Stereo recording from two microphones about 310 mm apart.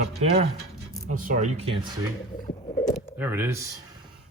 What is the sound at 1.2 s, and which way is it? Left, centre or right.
Speech, right.